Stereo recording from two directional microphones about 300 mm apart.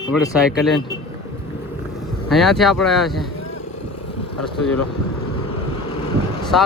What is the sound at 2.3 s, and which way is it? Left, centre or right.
Speech, centre.